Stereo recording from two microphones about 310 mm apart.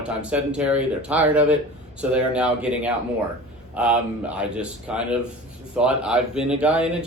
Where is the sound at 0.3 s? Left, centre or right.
Centre.